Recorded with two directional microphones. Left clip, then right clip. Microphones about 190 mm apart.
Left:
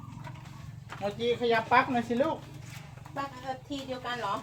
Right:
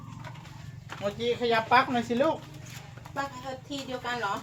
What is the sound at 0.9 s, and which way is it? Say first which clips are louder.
Speech: right 1 dB; 15° right (ahead or behind).